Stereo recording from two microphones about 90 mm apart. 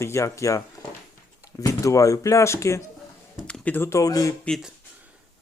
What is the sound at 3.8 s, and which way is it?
Speech, 40° left (ahead or behind).